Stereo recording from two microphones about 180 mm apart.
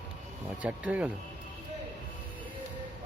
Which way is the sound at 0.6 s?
5° right (ahead or behind).